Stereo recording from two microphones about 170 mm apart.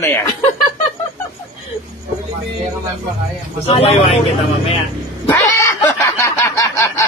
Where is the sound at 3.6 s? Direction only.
35° left (ahead or behind).